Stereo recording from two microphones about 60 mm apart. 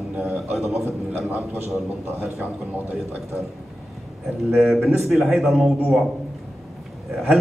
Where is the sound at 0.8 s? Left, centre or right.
Right.